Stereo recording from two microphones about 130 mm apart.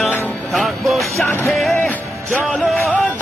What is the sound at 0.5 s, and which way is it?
Music, centre (ahead or behind).